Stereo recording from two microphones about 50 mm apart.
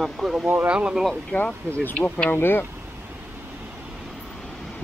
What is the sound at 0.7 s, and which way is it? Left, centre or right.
Speech, right.